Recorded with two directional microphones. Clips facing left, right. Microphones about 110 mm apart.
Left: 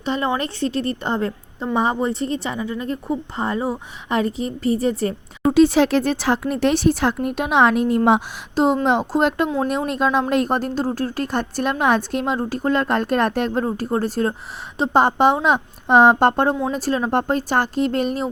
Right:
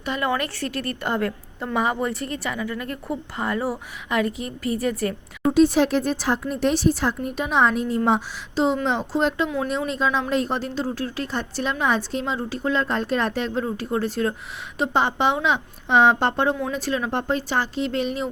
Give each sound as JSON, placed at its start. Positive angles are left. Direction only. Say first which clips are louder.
{"t": 0.0, "sound": "a woman's voice", "louder": "left 3 dB", "side_deg": 25}
{"t": 5.5, "sound": "speech", "louder": "left 3 dB", "side_deg": 85}
{"t": 8.5, "sound": "speech", "louder": "left 4 dB", "side_deg": 50}